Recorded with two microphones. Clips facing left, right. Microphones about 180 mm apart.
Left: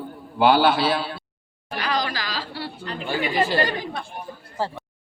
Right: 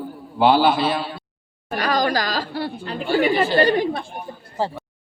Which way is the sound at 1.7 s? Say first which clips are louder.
Right 6 dB; 45° right (ahead or behind).